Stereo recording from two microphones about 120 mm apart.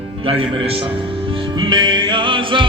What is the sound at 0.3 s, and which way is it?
Music, 50° right (ahead or behind).